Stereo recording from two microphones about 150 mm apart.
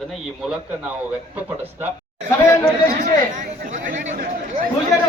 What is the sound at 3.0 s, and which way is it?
Chatter, 55° right (ahead or behind).